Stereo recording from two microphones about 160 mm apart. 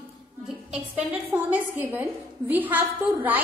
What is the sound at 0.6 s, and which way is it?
A woman's voice, 5° right (ahead or behind).